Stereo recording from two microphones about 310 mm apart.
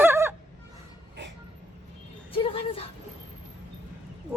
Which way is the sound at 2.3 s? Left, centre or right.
Centre.